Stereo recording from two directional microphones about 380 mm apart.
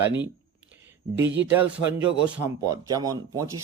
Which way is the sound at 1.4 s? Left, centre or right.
Centre.